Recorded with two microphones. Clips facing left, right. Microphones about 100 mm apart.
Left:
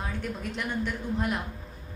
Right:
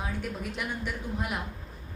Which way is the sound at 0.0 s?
5° right (ahead or behind).